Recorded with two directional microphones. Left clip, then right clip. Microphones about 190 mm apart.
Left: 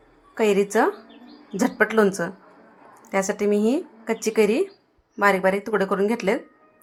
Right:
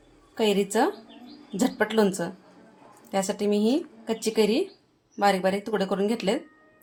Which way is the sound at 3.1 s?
15° left (ahead or behind).